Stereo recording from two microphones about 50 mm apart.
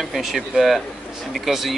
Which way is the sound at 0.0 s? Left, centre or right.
Centre.